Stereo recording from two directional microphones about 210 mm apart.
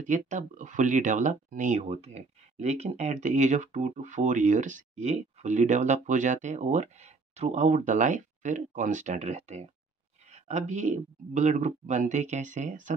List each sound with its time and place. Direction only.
0.0 s speech: 35° right (ahead or behind)
10.7 s speech: 35° right (ahead or behind)